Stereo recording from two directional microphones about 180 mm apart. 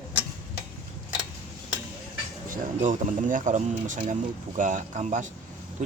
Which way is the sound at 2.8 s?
45° right (ahead or behind).